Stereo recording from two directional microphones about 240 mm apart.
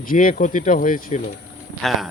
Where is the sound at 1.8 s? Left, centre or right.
Centre.